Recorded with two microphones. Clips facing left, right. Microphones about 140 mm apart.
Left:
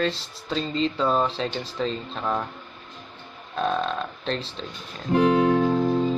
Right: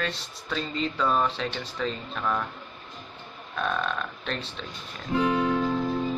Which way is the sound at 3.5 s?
30° left (ahead or behind).